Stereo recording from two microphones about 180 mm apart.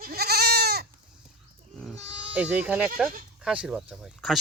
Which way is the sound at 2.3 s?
10° right (ahead or behind).